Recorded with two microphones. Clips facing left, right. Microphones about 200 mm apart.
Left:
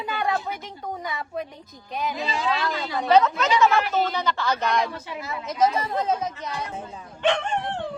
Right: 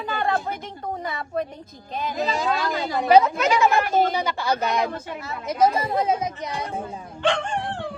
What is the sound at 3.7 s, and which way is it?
Speech, 50° right (ahead or behind).